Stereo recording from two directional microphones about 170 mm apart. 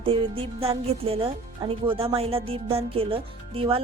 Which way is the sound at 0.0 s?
30° right (ahead or behind).